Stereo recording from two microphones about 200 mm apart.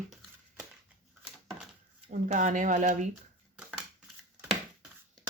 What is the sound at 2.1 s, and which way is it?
Speech, 40° right (ahead or behind).